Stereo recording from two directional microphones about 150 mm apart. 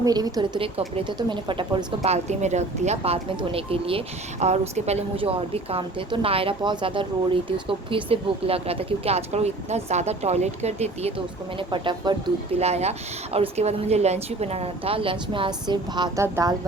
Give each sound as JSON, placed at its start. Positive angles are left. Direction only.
{"t": 0.0, "sound": "a woman's voice", "side_deg": -25}
{"t": 0.6, "sound": "speech", "side_deg": -40}
{"t": 2.0, "sound": "speech", "side_deg": -50}
{"t": 11.7, "sound": "speech", "side_deg": -30}
{"t": 12.5, "sound": "a woman's voice", "side_deg": -45}